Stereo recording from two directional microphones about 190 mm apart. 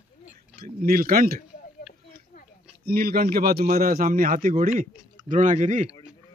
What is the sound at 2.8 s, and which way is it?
A man's voice, 55° right (ahead or behind).